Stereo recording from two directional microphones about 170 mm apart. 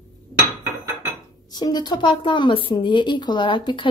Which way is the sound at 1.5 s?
25° left (ahead or behind).